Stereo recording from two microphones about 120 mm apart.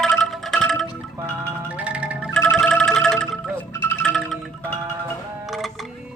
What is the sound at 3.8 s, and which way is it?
Music, 20° left (ahead or behind).